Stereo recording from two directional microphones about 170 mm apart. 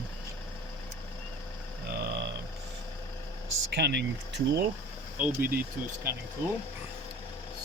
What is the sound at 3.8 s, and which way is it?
Speech, 85° right.